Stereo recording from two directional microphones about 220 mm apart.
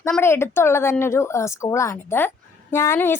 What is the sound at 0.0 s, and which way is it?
Speech, 10° left (ahead or behind).